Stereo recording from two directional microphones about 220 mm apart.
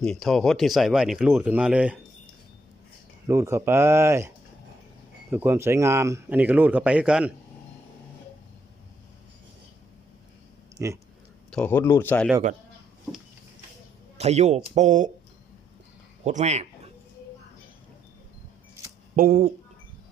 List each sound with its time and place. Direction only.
0.0 s speech: centre (ahead or behind)
3.2 s speech: 10° right (ahead or behind)
5.3 s speech: 10° right (ahead or behind)
10.8 s speech: 15° right (ahead or behind)
11.5 s speech: 10° left (ahead or behind)
14.2 s speech: 30° right (ahead or behind)
16.2 s speech: 30° right (ahead or behind)
19.1 s speech: 40° right (ahead or behind)